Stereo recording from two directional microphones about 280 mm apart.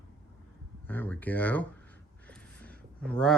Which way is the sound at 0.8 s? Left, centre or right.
Centre.